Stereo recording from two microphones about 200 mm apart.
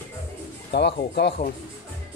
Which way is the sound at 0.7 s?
55° left (ahead or behind).